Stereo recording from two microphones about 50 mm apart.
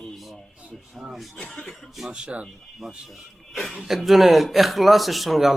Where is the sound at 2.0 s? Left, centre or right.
Centre.